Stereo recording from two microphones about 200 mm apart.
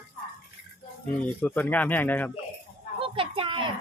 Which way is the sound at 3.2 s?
25° right (ahead or behind).